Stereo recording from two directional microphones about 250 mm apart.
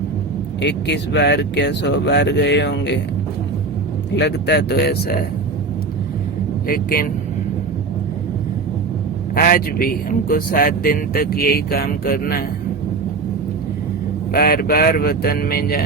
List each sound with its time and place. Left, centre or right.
0.6 s speech: left
4.1 s speech: left
6.7 s speech: left
9.3 s speech: left
14.3 s speech: left